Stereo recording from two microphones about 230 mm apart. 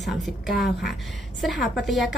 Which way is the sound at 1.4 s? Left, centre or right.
Centre.